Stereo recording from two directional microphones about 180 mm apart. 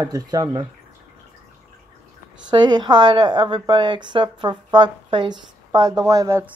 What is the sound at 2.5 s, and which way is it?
A woman's voice, 25° right (ahead or behind).